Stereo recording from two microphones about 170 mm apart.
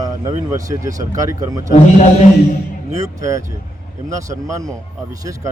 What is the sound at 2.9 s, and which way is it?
Speech, 20° right (ahead or behind).